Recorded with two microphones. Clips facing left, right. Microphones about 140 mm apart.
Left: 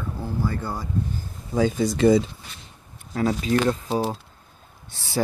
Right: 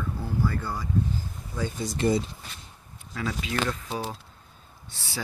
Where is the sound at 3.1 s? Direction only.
40° left (ahead or behind).